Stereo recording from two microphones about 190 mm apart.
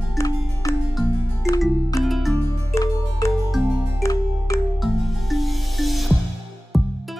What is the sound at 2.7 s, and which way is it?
Music, 15° left (ahead or behind).